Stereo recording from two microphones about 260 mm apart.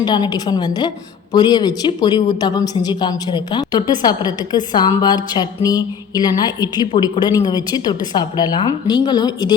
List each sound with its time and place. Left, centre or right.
0.0 s a woman's voice: centre